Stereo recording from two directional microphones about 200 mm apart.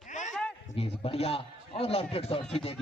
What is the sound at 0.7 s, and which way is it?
A man's voice, 30° left (ahead or behind).